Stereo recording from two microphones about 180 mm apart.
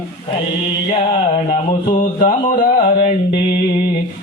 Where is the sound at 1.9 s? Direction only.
50° left (ahead or behind).